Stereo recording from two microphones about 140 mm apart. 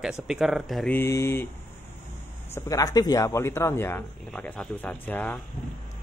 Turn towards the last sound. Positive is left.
turn(degrees=10)  # may be behind; listen again after turning